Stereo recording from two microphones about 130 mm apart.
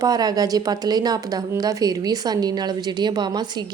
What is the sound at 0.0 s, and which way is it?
Speech, 30° right (ahead or behind).